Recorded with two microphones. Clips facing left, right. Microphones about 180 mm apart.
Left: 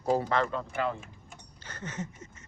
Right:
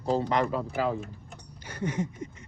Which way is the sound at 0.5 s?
5° right (ahead or behind).